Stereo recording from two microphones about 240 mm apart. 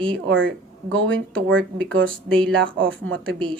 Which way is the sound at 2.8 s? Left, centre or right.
Right.